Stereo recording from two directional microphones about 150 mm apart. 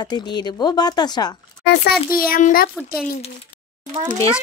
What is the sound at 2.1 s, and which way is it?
Speech, 75° left (ahead or behind).